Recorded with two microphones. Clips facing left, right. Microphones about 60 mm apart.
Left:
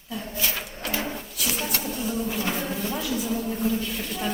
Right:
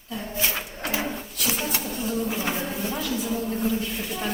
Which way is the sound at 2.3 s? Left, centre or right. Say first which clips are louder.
Even; centre.